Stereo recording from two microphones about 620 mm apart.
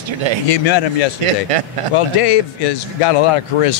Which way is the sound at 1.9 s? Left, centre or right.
Left.